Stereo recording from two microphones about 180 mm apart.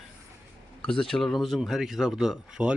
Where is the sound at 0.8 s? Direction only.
5° left (ahead or behind).